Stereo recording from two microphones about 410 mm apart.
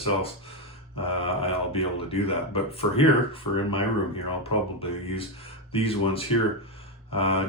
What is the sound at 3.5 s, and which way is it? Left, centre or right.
Speech, left.